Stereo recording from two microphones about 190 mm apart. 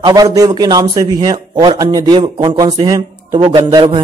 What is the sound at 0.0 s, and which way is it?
A man's voice, 20° right (ahead or behind).